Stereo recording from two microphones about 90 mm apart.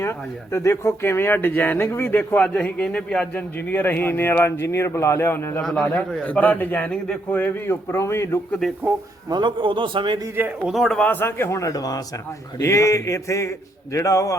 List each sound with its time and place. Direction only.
0.0 s a man's voice: 30° left (ahead or behind)
5.6 s a man's voice: 5° left (ahead or behind); by 8.4 s 30° left (ahead or behind)
8.6 s speech: 5° left (ahead or behind)
9.3 s a man's voice: 60° right (ahead or behind)
10.7 s speech: centre (ahead or behind)
11.0 s a man's voice: 25° left (ahead or behind)